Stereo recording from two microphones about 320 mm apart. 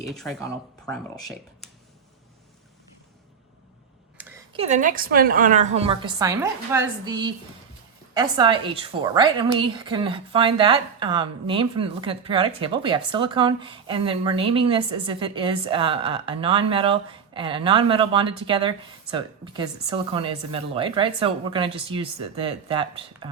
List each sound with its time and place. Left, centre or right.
0.1 s speech: centre
4.2 s a sound: centre
4.5 s a woman's voice: right